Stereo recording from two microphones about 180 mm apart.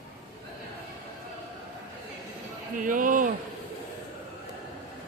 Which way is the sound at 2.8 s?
45° right (ahead or behind).